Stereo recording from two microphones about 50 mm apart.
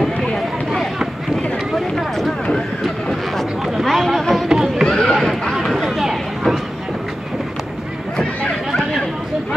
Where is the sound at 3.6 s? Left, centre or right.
Centre.